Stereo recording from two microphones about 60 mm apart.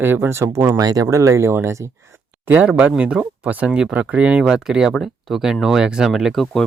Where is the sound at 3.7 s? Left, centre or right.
Centre.